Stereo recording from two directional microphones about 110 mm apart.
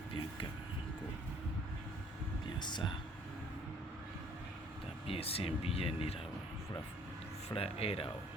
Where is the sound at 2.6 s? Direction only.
45° left (ahead or behind).